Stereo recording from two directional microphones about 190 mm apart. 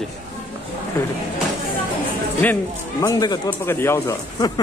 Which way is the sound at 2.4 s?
10° left (ahead or behind).